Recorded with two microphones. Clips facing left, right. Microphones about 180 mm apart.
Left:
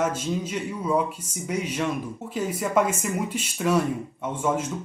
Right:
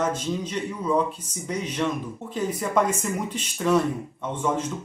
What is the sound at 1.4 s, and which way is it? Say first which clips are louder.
Speech: even; 10° left (ahead or behind).